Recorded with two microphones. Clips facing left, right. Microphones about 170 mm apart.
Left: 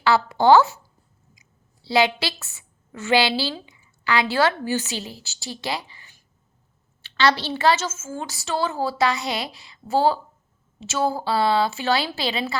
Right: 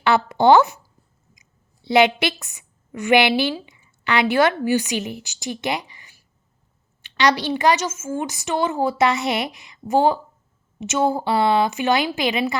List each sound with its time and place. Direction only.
0.0 s a woman's voice: 20° right (ahead or behind)